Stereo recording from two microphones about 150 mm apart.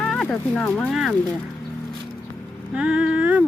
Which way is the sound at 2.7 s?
5° right (ahead or behind).